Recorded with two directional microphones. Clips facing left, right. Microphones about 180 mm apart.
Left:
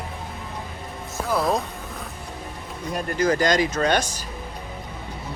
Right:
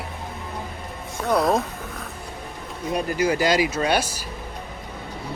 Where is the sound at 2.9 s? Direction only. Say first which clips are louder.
Even; 5° right (ahead or behind).